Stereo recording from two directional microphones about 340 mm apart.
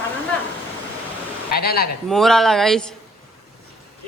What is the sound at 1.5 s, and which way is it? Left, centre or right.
Speech, left.